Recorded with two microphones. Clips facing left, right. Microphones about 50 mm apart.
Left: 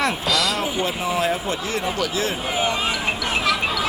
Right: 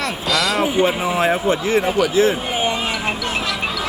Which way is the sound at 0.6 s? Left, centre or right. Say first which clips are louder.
Right 6 dB; right.